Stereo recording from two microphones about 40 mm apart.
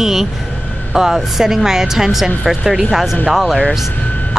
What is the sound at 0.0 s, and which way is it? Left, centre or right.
A woman's voice, centre.